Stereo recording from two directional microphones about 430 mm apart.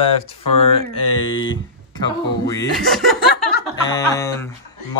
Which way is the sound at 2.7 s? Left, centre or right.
Centre.